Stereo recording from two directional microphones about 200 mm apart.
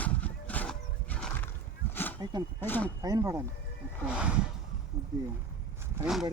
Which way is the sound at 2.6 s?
10° left (ahead or behind).